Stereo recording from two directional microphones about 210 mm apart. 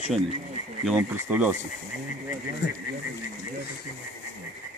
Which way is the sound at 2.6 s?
55° left (ahead or behind).